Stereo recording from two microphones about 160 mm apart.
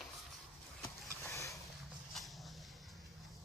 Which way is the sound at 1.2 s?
20° left (ahead or behind).